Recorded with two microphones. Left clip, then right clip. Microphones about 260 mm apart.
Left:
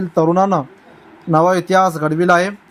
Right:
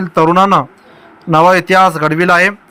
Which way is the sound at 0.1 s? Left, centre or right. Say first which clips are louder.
Right 5 dB; right.